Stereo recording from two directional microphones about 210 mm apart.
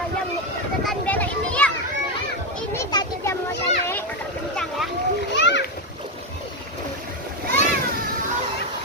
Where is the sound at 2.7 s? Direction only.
15° left (ahead or behind).